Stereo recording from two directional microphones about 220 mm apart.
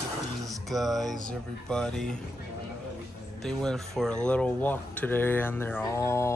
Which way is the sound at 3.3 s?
Centre (ahead or behind).